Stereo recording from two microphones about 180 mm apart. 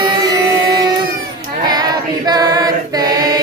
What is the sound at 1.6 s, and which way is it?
Choir, 20° right (ahead or behind).